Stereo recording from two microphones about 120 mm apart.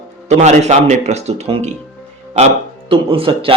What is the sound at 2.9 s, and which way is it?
Speech, 50° right (ahead or behind).